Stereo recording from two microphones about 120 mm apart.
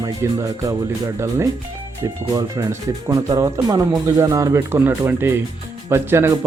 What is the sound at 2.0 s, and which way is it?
Speech, 25° right (ahead or behind).